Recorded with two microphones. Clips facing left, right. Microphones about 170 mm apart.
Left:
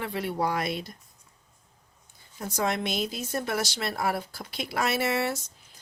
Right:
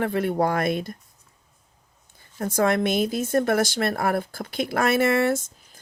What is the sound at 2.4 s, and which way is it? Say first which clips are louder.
Speech: right 7 dB; 50° right (ahead or behind).